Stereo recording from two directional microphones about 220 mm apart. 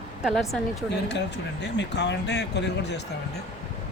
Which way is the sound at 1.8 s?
50° left (ahead or behind).